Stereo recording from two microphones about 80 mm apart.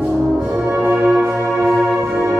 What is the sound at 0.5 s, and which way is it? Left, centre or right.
Brass instrument, right.